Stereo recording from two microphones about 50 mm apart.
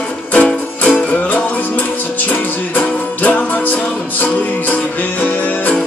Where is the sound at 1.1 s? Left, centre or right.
Left.